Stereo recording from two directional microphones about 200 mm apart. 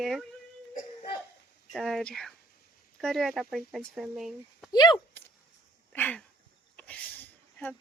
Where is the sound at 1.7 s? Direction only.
Centre (ahead or behind).